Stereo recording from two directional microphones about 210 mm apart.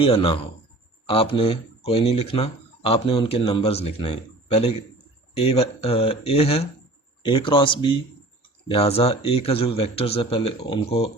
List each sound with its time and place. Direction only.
0.0 s speech: 25° left (ahead or behind)